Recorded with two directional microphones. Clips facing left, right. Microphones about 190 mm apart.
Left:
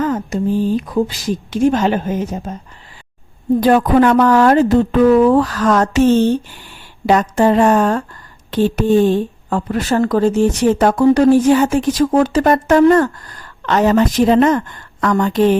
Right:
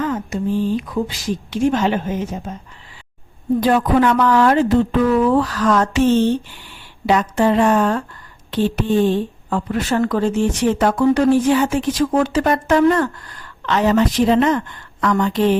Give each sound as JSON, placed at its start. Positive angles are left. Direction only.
{"t": 0.0, "sound": "a woman's voice", "side_deg": 40}
{"t": 3.6, "sound": "speech", "side_deg": 45}